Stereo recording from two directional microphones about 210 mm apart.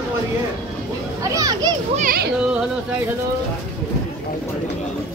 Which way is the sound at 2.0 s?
40° right (ahead or behind).